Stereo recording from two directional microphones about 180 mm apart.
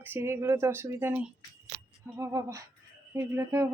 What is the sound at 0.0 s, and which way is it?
Speech, 10° right (ahead or behind).